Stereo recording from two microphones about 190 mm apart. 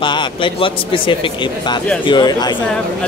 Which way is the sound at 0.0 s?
25° left (ahead or behind).